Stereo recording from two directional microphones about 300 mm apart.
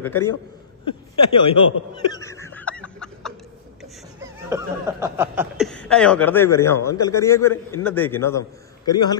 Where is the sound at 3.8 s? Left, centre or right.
Centre.